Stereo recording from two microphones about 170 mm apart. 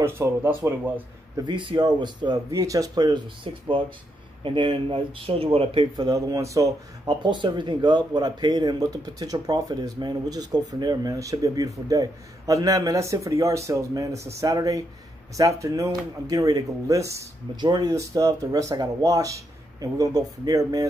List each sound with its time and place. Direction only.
0.0 s speech: 15° right (ahead or behind)
1.4 s speech: 30° right (ahead or behind)